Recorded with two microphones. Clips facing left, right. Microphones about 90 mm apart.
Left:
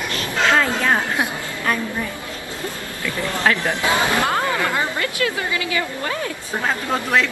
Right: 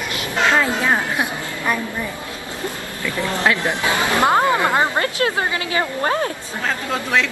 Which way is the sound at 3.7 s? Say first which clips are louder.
Even; 20° right (ahead or behind).